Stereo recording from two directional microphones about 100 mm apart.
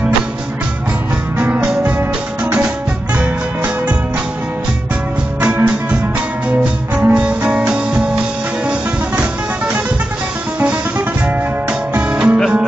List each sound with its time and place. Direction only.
1.4 s music: 10° right (ahead or behind)
5.4 s music: 15° right (ahead or behind)
11.9 s music: 15° right (ahead or behind)